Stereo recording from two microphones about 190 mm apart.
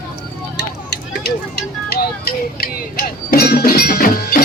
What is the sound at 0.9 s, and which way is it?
Speech, 55° left (ahead or behind).